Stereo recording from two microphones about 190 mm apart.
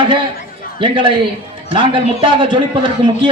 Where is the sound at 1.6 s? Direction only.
25° right (ahead or behind).